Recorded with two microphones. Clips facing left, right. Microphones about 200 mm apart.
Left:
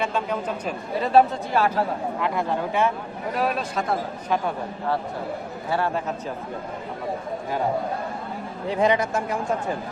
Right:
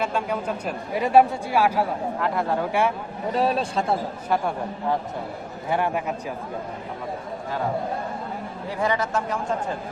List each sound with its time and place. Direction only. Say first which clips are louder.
0.0 s a man's voice: even; 10° right (ahead or behind)
3.3 s a man's voice: right 3 dB; 30° right (ahead or behind)
4.3 s a man's voice: right 1 dB; 10° right (ahead or behind)
8.7 s a man's voice: left 4 dB; 20° left (ahead or behind)
9.1 s speech: left 1 dB; 10° left (ahead or behind)